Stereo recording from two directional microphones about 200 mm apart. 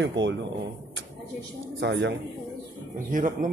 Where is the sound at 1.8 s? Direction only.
60° right (ahead or behind).